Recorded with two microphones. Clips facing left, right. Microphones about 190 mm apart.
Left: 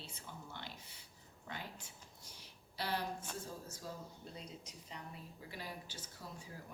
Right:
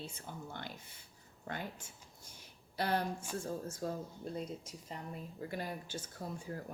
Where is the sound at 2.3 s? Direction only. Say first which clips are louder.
Right 7 dB; 50° right (ahead or behind).